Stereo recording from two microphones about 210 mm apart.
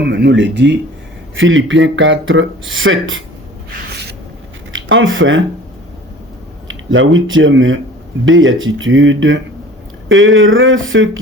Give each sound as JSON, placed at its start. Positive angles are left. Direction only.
{"t": 0.0, "sound": "speech", "side_deg": -55}
{"t": 4.7, "sound": "speech", "side_deg": -65}
{"t": 6.7, "sound": "speech", "side_deg": -65}